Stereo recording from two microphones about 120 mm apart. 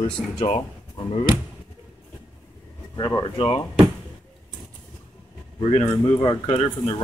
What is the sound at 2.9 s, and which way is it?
Speech, 30° left (ahead or behind).